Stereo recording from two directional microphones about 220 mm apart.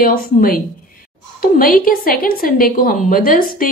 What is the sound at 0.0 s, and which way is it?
A woman's voice, 40° left (ahead or behind).